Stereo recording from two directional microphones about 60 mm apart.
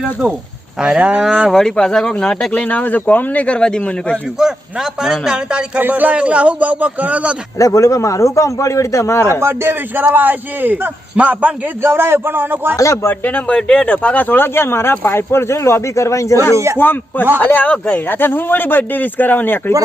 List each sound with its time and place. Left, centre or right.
0.8 s a man's voice: centre
1.5 s speech: centre
2.6 s a man's voice: left
4.4 s a man's voice: centre
5.5 s a man's voice: centre
5.8 s a man's voice: right
7.6 s a man's voice: left
9.4 s a man's voice: right
11.8 s a man's voice: right
12.7 s a man's voice: left
13.1 s a man's voice: left
13.5 s speech: centre; by 16.6 s left
16.7 s a man's voice: left